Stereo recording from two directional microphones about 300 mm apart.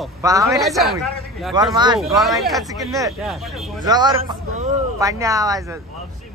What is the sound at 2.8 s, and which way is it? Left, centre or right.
Speech, centre.